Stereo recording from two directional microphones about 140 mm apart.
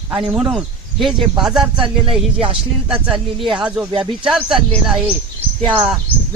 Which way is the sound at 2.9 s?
5° right (ahead or behind).